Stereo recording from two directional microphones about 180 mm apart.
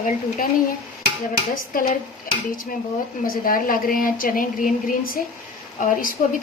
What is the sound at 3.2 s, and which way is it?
Speech, 50° left (ahead or behind).